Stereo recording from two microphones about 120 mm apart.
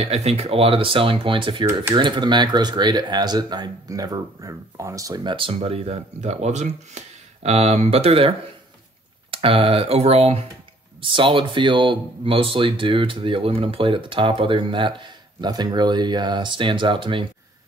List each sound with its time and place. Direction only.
0.0 s speech: 60° right (ahead or behind)
11.0 s speech: 45° right (ahead or behind)